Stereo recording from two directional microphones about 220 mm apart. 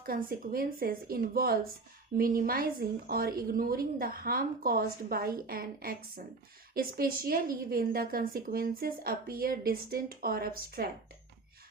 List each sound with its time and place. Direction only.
0.0 s a woman's voice: 40° right (ahead or behind)